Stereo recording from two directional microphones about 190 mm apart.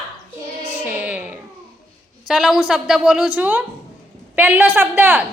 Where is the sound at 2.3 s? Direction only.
Centre (ahead or behind).